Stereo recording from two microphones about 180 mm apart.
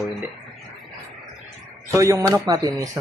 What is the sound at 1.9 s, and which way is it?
Speech, 15° right (ahead or behind).